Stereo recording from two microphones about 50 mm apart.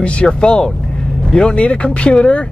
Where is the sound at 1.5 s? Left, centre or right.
Left.